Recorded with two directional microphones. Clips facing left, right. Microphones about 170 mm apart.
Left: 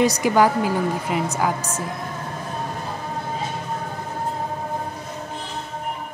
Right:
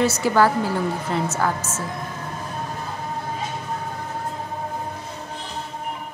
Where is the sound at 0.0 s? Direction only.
15° left (ahead or behind).